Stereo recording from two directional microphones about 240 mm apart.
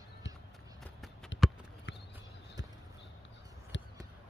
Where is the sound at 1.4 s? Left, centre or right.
Centre.